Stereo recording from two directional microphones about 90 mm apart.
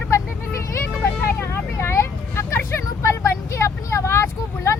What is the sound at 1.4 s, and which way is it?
Vehicle, 30° left (ahead or behind).